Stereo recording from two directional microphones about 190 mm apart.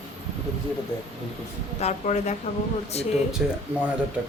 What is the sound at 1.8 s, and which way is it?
Speech, 35° left (ahead or behind).